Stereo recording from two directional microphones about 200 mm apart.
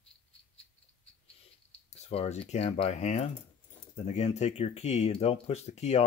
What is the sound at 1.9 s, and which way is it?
Speech, 30° left (ahead or behind).